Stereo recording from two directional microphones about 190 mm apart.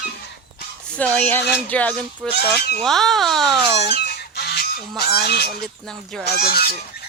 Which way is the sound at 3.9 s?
55° left (ahead or behind).